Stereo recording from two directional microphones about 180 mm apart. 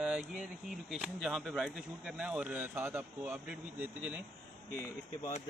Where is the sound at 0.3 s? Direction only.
Centre (ahead or behind).